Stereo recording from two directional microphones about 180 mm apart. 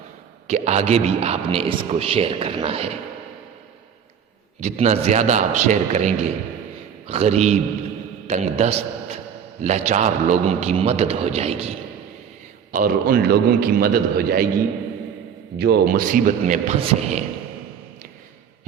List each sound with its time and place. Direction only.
0.4 s speech: 40° right (ahead or behind)
4.6 s speech: 40° right (ahead or behind)
12.7 s a man's voice: 50° right (ahead or behind)
15.5 s a man's voice: 60° right (ahead or behind); by 17.2 s 40° right (ahead or behind)